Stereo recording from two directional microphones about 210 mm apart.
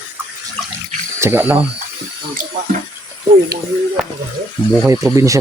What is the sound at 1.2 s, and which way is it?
Speech, 10° right (ahead or behind).